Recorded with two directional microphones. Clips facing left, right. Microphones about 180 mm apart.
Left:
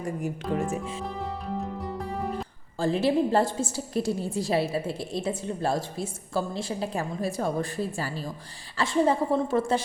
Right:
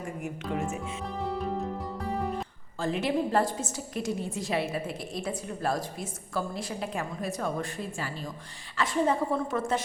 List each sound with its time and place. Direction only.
0.5 s a woman's voice: 35° left (ahead or behind)
1.0 s music: centre (ahead or behind)
2.7 s a woman's voice: 30° left (ahead or behind)